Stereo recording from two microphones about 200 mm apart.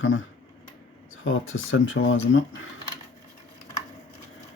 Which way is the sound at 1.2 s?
80° left.